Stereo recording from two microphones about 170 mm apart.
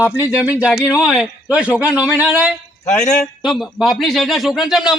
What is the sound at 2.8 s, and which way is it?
Speech, 45° left (ahead or behind).